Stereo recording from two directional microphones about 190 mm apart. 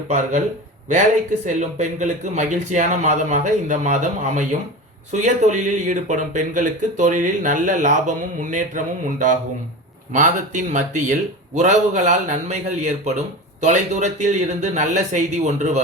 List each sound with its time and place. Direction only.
1.5 s speech: 40° right (ahead or behind)